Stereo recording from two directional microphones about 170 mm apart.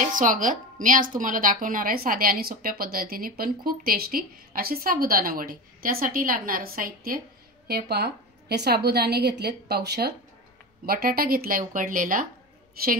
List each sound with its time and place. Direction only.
0.0 s a woman's voice: 50° right (ahead or behind)
7.6 s a woman's voice: 70° right (ahead or behind)
10.9 s a woman's voice: 60° right (ahead or behind)